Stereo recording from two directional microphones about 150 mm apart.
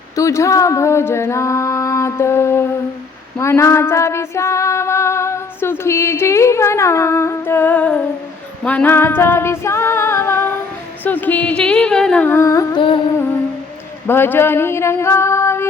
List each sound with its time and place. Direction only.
0.2 s a sound: 20° left (ahead or behind)
3.3 s female singing: 20° left (ahead or behind)
11.0 s carnatic music: 10° left (ahead or behind)
14.1 s female singing: 15° left (ahead or behind)